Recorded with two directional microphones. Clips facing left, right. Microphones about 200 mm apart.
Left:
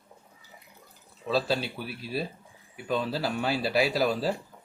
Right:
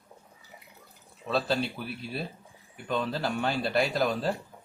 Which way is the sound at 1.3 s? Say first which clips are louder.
Left 1 dB; centre (ahead or behind).